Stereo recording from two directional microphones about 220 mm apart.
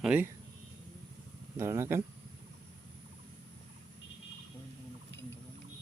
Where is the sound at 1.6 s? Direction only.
10° right (ahead or behind).